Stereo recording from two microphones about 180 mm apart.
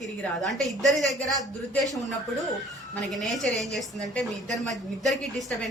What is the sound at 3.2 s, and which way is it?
A woman's voice, centre (ahead or behind).